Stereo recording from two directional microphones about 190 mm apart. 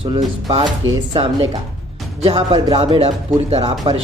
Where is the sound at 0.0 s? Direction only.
30° right (ahead or behind).